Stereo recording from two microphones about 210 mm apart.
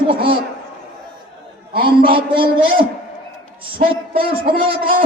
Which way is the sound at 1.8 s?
25° right (ahead or behind).